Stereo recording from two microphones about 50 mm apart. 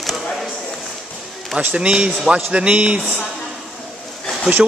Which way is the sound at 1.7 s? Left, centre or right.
Centre.